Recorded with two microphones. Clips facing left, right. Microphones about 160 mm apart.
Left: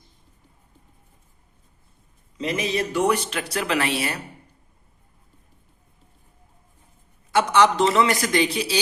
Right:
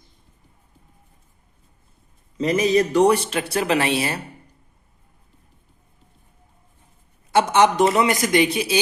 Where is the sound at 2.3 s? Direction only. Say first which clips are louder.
Right 7 dB; 40° right (ahead or behind).